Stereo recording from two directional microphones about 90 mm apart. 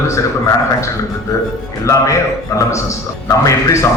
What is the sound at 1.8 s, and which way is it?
A man's voice, 35° left (ahead or behind).